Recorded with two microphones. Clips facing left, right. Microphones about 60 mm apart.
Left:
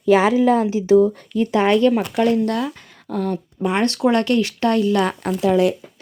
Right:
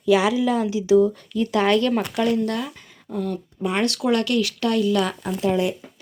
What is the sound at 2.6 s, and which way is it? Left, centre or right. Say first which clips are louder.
Speech: left 5 dB; left.